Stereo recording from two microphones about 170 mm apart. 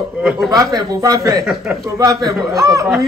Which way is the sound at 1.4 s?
Centre (ahead or behind).